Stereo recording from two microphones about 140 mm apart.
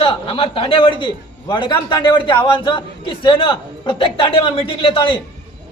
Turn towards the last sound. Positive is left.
turn(degrees=40)  # may be behind; listen again after turning